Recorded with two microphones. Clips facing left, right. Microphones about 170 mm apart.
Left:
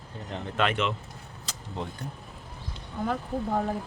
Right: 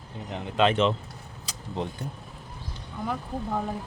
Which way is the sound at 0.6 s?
30° right (ahead or behind).